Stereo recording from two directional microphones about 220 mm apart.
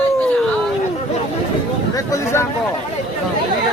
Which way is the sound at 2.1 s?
10° left (ahead or behind).